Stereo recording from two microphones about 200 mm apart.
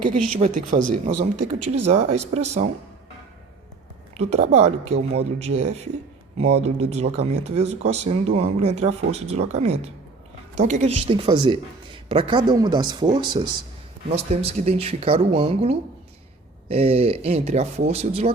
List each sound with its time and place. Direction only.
0.3 s speech: 40° right (ahead or behind)
4.2 s speech: 35° right (ahead or behind)